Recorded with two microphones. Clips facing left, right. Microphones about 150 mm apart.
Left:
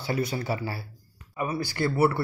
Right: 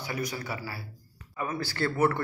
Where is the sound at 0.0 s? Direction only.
30° left (ahead or behind).